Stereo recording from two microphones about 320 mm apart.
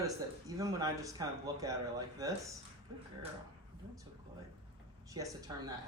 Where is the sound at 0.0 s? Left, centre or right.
Centre.